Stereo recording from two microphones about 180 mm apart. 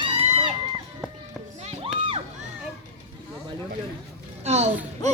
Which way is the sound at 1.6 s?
35° right (ahead or behind).